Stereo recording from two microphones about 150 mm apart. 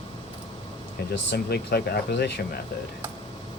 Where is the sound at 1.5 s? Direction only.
90° left.